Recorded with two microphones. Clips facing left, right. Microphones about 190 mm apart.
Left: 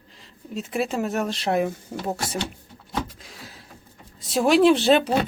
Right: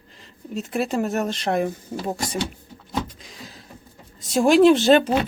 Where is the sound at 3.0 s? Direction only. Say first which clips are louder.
Right 2 dB; 5° left (ahead or behind).